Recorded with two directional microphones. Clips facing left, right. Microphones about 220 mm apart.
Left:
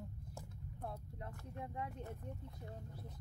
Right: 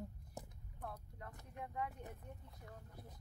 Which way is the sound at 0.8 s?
25° left (ahead or behind).